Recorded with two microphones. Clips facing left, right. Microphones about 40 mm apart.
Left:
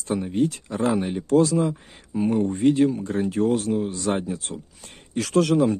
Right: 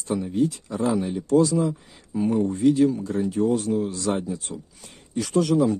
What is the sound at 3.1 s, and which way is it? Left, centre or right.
Speech, left.